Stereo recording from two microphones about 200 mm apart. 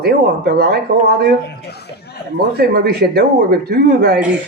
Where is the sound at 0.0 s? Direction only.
50° right (ahead or behind).